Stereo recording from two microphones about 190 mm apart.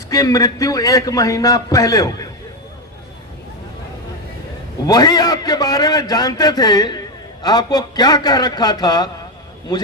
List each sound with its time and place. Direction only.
0.1 s a man's voice: 20° left (ahead or behind)
4.9 s a man's voice: 20° left (ahead or behind)